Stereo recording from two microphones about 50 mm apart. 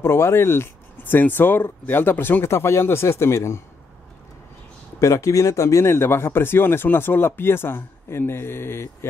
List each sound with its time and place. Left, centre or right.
0.0 s speech: left
5.0 s speech: left
5.9 s speech: left